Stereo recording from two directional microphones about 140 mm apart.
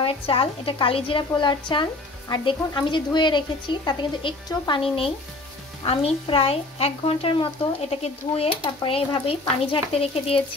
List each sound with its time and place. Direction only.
0.0 s a woman's voice: 40° left (ahead or behind)